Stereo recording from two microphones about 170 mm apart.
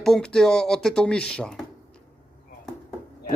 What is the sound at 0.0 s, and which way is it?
A man's voice, 5° left (ahead or behind).